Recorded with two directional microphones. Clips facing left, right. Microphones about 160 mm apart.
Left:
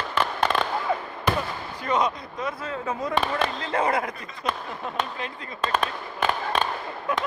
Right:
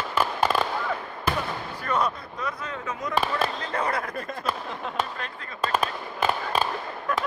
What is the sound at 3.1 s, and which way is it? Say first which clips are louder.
Speech: right 1 dB; 5° right (ahead or behind).